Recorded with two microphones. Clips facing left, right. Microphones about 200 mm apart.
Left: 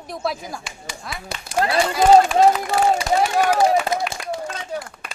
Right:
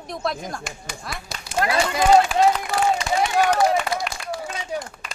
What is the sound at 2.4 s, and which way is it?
Speech, 35° left (ahead or behind).